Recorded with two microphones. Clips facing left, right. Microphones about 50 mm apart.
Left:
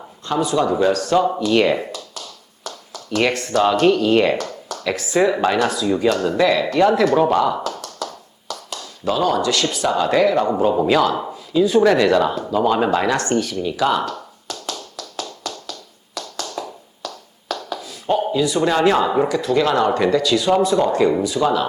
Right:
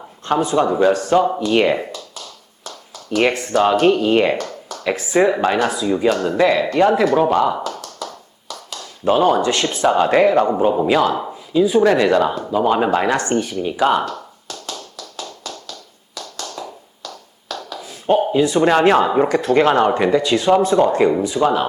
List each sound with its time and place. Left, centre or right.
0.3 s speech: right
3.1 s speech: centre
7.7 s tap: right
9.0 s speech: right
10.8 s speech: centre
14.7 s tap: centre
16.4 s tap: centre
17.7 s speech: right
19.3 s speech: right
19.9 s speech: right
20.3 s speech: right